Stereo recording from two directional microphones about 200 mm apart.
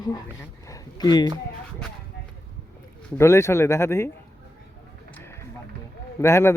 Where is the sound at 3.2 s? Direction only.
15° left (ahead or behind).